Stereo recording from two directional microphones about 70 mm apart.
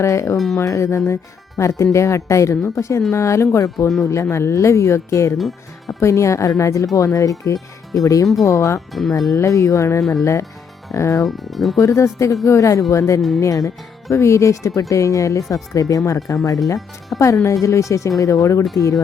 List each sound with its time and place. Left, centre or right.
0.0 s speech: left
4.0 s speech: left
5.4 s speech: centre
6.0 s speech: left
8.9 s speech: centre
9.3 s speech: left
11.3 s speech: centre
11.8 s speech: left